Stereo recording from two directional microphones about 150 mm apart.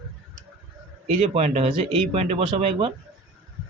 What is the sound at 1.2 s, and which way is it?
Speech, 45° right (ahead or behind).